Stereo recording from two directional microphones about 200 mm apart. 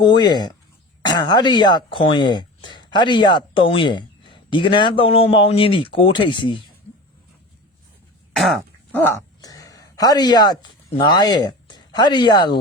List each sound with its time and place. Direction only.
0.0 s speech: 20° left (ahead or behind)
8.4 s speech: centre (ahead or behind); by 12.5 s 20° left (ahead or behind)